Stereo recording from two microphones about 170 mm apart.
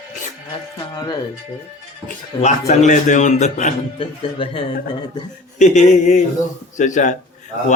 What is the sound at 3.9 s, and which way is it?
Speech, 30° left (ahead or behind).